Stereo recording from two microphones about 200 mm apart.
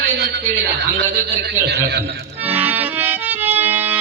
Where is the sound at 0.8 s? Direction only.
55° right (ahead or behind).